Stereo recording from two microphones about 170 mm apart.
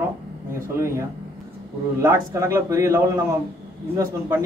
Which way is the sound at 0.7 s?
15° right (ahead or behind).